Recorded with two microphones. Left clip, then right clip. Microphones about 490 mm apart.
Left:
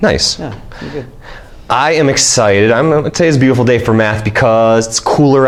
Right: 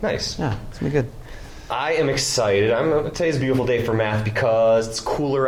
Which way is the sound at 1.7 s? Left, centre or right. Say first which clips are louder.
Left 10 dB; left.